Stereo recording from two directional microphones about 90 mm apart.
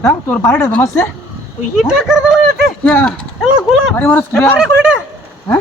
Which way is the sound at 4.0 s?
20° left (ahead or behind).